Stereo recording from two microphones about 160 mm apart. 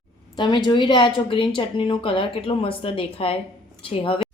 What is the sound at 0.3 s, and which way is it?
A woman's voice, 30° left (ahead or behind).